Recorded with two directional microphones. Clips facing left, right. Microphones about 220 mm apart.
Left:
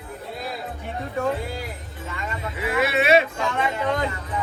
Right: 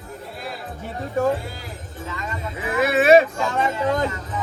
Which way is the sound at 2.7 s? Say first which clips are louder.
Right 4 dB; 45° right (ahead or behind).